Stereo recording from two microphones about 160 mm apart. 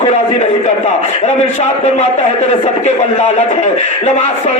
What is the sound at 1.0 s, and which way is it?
A man's voice, 45° left (ahead or behind).